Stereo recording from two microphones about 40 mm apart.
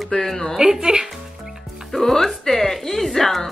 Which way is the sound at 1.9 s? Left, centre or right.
Centre.